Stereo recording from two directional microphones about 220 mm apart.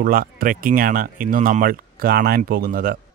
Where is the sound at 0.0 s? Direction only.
40° right (ahead or behind).